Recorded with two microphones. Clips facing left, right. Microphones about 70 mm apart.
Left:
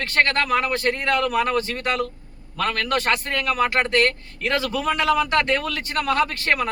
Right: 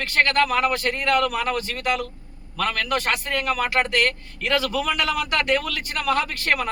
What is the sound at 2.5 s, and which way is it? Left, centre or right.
A man's voice, left.